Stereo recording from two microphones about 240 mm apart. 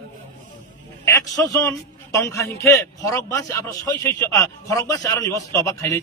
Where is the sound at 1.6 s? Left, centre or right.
Centre.